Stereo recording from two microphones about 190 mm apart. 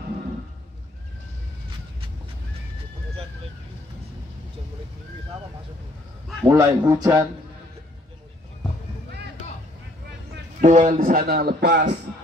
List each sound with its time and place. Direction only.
6.5 s a man's voice: 15° right (ahead or behind)
10.6 s a man's voice: 40° right (ahead or behind); by 11.9 s 65° right (ahead or behind)